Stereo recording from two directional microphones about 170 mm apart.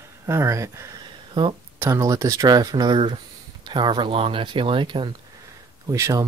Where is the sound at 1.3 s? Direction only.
30° right (ahead or behind).